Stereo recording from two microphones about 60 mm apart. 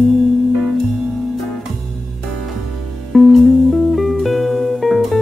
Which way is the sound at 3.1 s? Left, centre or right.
Centre.